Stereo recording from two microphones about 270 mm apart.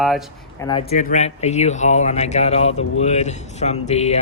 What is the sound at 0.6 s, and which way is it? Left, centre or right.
Speech, centre.